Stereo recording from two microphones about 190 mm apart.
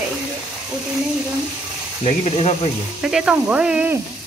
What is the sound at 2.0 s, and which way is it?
Speech, 35° left (ahead or behind).